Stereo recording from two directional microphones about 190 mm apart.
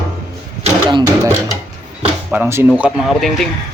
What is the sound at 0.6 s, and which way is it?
Music, 25° right (ahead or behind).